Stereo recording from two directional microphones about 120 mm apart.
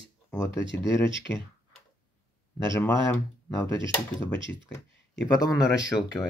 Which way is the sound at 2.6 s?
25° left (ahead or behind).